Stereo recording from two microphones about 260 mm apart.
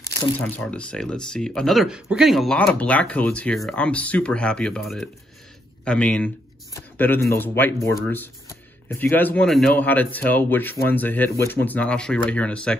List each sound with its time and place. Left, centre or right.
0.4 s speech: centre